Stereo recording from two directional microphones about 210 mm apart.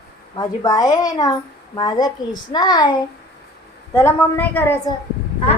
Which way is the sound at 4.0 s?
10° left (ahead or behind).